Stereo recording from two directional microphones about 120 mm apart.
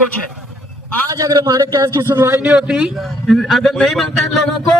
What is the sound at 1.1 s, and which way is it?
A man's voice, 30° right (ahead or behind).